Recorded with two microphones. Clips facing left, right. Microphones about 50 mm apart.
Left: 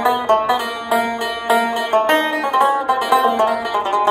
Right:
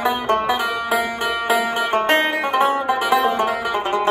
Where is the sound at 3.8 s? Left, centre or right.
Centre.